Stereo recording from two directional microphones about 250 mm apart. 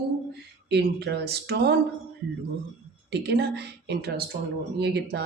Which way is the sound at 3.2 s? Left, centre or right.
Right.